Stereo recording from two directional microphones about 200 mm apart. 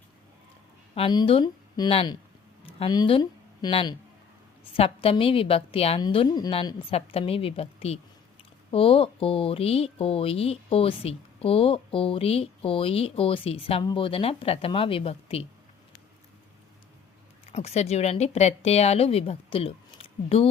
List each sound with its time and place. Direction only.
0.9 s speech: 25° left (ahead or behind)
17.5 s speech: 30° left (ahead or behind)